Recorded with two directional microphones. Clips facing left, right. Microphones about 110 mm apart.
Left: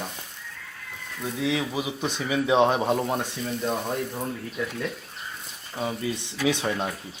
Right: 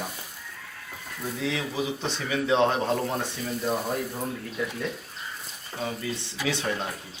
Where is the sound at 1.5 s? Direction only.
15° left (ahead or behind).